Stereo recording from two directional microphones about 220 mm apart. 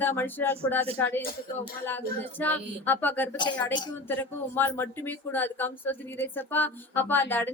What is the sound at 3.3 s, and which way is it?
Speech, 20° left (ahead or behind).